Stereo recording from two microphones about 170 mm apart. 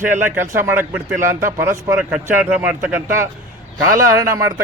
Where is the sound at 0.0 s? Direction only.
15° right (ahead or behind).